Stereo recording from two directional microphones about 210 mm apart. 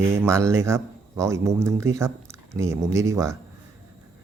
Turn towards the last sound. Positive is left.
turn(degrees=-15)  # may be behind; listen again after turning